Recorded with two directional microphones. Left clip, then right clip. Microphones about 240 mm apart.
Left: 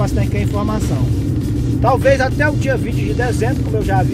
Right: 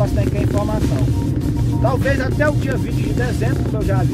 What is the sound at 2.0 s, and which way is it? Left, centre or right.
Speech, centre.